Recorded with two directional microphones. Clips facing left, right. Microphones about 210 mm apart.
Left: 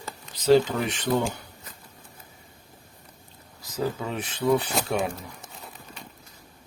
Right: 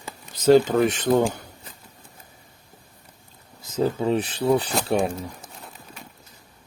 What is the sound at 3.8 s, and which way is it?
Speech, 30° right (ahead or behind).